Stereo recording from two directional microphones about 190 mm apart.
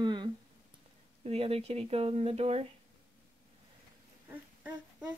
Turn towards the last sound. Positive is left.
turn(degrees=-5)  # may be behind; listen again after turning